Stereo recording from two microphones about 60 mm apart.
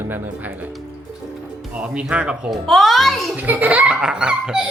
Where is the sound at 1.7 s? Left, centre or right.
Right.